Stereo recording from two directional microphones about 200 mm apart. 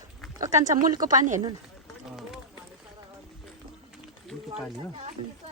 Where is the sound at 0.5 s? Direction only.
40° right (ahead or behind).